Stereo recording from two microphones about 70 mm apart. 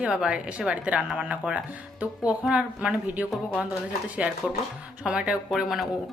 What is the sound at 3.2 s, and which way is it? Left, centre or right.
A woman's voice, right.